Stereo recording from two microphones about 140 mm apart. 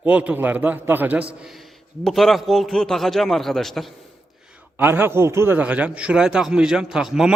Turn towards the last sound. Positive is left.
turn(degrees=-5)  # may be behind; listen again after turning